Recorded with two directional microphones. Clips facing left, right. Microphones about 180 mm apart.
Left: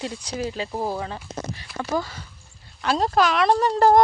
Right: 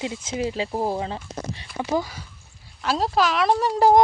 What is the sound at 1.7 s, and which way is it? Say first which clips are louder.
Speech: right 2 dB; 15° right (ahead or behind).